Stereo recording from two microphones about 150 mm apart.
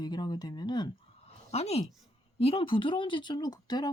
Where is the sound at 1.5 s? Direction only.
45° left (ahead or behind); by 3.8 s 25° left (ahead or behind).